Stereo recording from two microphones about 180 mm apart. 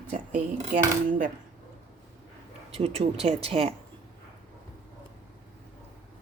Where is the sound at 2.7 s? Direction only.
35° right (ahead or behind).